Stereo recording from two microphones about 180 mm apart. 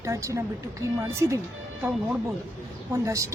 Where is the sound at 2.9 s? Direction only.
15° right (ahead or behind).